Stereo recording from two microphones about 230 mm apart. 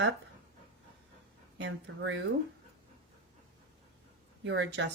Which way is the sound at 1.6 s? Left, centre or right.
Right.